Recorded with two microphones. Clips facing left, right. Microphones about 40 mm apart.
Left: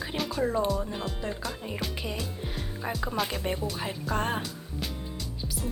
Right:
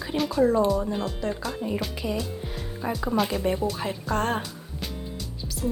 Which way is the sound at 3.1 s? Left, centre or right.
Centre.